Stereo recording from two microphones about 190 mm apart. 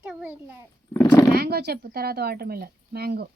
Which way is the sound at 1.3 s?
55° right (ahead or behind).